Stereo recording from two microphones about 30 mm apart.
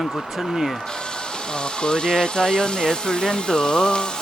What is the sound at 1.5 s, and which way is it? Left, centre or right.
Speech, left.